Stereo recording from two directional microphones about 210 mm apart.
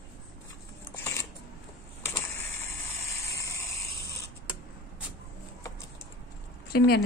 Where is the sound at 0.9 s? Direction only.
10° left (ahead or behind).